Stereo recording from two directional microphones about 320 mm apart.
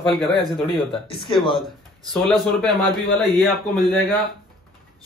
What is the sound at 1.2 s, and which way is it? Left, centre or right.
Speech, centre.